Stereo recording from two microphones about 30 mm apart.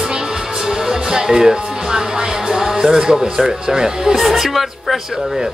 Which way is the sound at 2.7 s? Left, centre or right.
Right.